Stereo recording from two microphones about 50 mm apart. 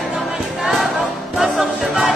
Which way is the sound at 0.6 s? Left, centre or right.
Centre.